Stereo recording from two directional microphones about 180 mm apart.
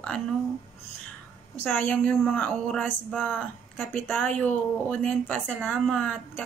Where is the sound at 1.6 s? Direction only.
10° left (ahead or behind).